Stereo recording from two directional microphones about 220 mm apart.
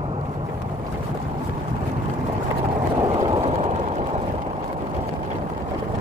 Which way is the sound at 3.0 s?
20° right (ahead or behind).